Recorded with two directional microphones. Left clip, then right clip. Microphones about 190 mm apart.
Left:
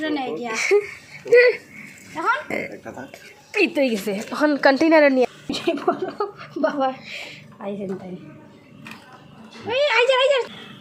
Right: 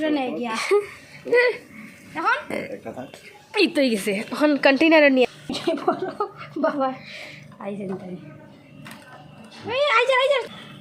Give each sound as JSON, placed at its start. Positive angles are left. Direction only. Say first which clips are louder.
{"t": 0.0, "sound": "a woman's voice", "louder": "right 1 dB", "side_deg": -35}
{"t": 0.5, "sound": "speech", "louder": "left 3 dB", "side_deg": 5}
{"t": 2.1, "sound": "speech", "louder": "even", "side_deg": -45}
{"t": 2.5, "sound": "speech", "louder": "left 2 dB", "side_deg": 5}
{"t": 3.7, "sound": "a woman's voice", "louder": "even", "side_deg": -5}
{"t": 5.5, "sound": "speech", "louder": "left 1 dB", "side_deg": 15}
{"t": 9.6, "sound": "a woman's voice", "louder": "left 1 dB", "side_deg": 0}